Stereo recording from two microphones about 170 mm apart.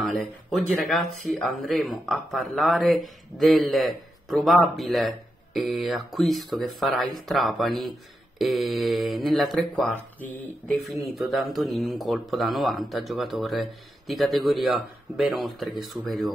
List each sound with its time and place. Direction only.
0.0 s speech: centre (ahead or behind)
11.5 s speech: centre (ahead or behind)